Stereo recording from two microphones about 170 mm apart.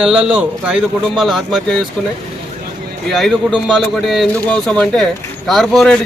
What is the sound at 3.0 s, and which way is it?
A man's voice, centre (ahead or behind).